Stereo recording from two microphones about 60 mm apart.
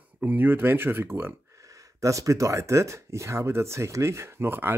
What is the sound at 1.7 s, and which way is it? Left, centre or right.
Speech, right.